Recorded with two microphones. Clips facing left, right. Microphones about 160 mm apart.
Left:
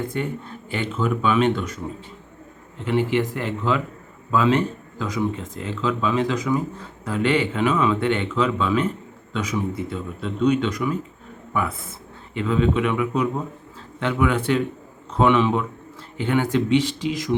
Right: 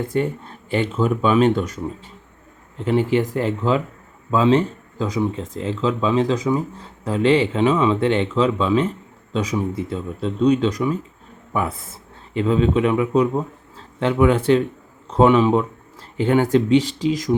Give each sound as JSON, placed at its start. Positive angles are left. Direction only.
{"t": 0.1, "sound": "speech", "side_deg": -35}